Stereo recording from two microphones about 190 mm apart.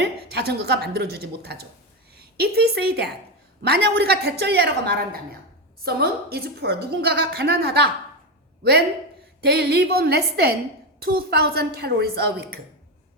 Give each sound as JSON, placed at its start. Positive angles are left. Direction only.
{"t": 0.0, "sound": "a woman's voice", "side_deg": -60}
{"t": 9.4, "sound": "a woman's voice", "side_deg": -55}